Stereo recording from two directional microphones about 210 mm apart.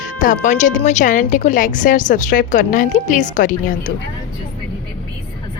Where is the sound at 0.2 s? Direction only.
35° left (ahead or behind).